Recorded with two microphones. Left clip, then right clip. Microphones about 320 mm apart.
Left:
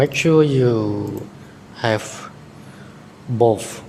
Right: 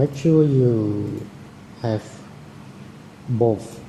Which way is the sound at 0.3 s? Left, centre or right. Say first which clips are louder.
Left 1 dB; left.